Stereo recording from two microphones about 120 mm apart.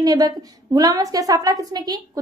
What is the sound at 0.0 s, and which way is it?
A woman's voice, 35° right (ahead or behind).